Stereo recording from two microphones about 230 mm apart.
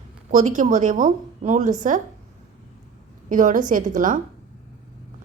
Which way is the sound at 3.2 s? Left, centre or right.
Right.